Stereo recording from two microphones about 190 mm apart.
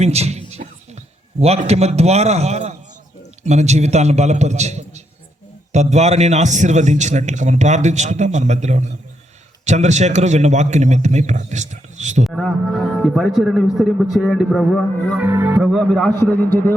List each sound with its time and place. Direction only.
0.0 s a sound: 35° right (ahead or behind)
1.4 s a man's voice: 35° right (ahead or behind)
12.2 s a man's voice: centre (ahead or behind)
15.2 s a man's voice: 10° right (ahead or behind); by 16.7 s 10° left (ahead or behind)